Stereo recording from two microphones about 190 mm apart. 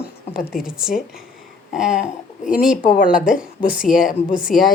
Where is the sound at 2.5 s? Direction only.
5° right (ahead or behind).